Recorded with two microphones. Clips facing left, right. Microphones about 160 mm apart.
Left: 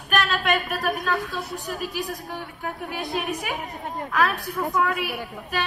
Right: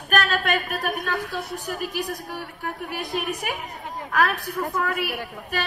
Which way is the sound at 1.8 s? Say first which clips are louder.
Right 1 dB; 65° right (ahead or behind).